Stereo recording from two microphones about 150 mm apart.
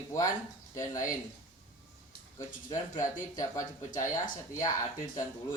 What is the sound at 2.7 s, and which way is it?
Speech, 25° left (ahead or behind).